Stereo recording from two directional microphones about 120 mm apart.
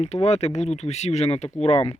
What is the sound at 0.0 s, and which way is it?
Speech, 65° left (ahead or behind).